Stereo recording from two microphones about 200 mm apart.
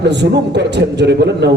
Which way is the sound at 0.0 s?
60° right (ahead or behind).